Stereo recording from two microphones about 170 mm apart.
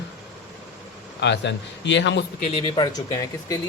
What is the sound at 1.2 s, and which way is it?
Speech, 90° left.